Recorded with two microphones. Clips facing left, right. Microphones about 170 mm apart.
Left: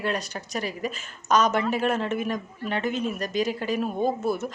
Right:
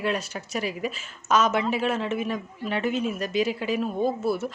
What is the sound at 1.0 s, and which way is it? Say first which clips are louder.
A woman's voice: left 1 dB; 5° right (ahead or behind).